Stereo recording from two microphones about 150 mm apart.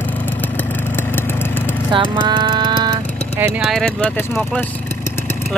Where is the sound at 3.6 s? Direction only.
Centre (ahead or behind).